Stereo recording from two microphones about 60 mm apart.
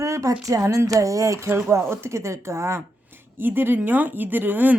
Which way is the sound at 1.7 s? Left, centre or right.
Right.